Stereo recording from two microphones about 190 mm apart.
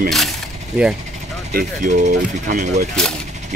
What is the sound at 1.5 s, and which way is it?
Speech, 45° right (ahead or behind).